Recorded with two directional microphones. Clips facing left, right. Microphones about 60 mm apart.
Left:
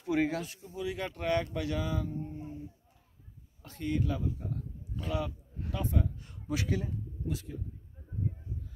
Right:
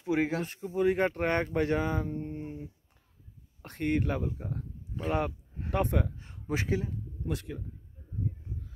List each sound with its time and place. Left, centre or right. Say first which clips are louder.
0.4 s speech: right 8 dB; right
5.7 s a man's voice: right 5 dB; right
6.1 s a man's voice: right 2 dB; right
7.2 s a man's voice: right 3 dB; right